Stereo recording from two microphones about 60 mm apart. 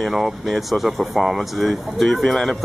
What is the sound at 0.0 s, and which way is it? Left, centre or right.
Speech, centre.